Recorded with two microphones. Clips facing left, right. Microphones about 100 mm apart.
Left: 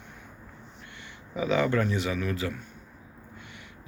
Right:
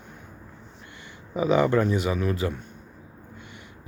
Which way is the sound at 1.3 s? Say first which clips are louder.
Right 4 dB; 25° right (ahead or behind).